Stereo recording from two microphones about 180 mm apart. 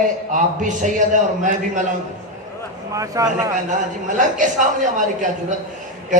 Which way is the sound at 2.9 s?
20° right (ahead or behind).